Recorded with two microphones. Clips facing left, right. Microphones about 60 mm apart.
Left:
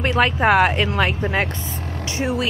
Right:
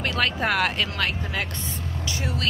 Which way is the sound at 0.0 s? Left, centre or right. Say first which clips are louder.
Left 7 dB; left.